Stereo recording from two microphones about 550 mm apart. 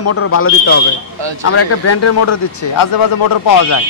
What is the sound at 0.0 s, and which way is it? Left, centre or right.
Speech, left.